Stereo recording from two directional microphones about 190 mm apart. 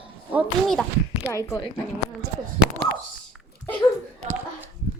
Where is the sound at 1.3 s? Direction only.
15° left (ahead or behind).